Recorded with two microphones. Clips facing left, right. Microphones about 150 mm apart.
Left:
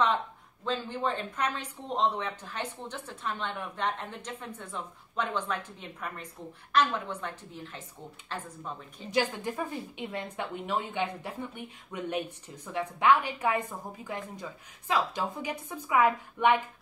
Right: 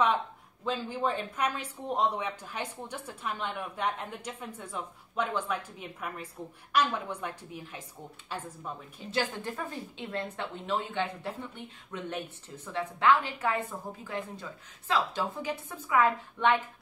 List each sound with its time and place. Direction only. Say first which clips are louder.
0.7 s speech: even; 10° right (ahead or behind)
9.1 s a woman's voice: left 3 dB; 15° left (ahead or behind)